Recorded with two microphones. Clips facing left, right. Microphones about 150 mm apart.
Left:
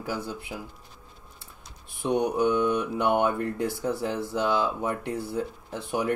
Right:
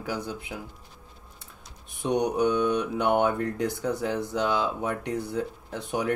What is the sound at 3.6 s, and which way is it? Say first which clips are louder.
Speech: even; 15° right (ahead or behind).